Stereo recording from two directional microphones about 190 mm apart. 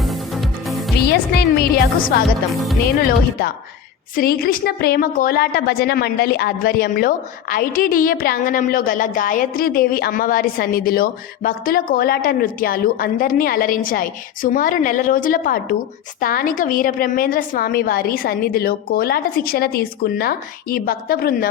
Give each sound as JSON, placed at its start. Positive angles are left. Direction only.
{"t": 0.0, "sound": "music", "side_deg": 0}
{"t": 0.9, "sound": "a woman's voice", "side_deg": 55}